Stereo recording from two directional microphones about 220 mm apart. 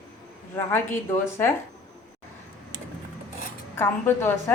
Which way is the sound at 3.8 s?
10° left (ahead or behind).